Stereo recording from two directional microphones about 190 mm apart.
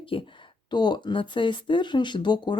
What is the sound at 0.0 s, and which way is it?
Speech, 25° left (ahead or behind).